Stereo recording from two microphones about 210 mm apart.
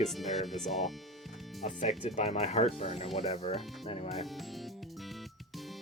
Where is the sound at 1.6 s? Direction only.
35° left (ahead or behind).